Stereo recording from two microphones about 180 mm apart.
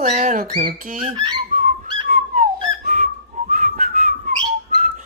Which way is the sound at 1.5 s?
45° right (ahead or behind).